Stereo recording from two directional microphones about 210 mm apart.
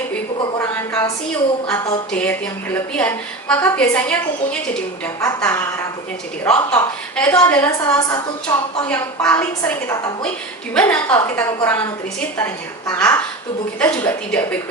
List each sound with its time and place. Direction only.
0.6 s a sound: 10° left (ahead or behind)
1.7 s a woman's voice: 10° left (ahead or behind)
8.8 s a woman's voice: 5° left (ahead or behind)